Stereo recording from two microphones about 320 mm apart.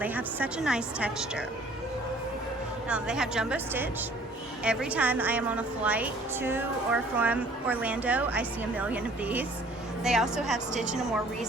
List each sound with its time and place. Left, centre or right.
0.0 s a woman's voice: centre
2.9 s a woman's voice: centre